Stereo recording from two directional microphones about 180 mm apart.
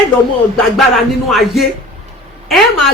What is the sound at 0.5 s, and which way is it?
A woman's voice, centre (ahead or behind).